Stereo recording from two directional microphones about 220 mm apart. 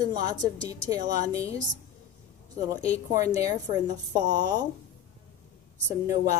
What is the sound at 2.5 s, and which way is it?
A woman's voice, 15° right (ahead or behind).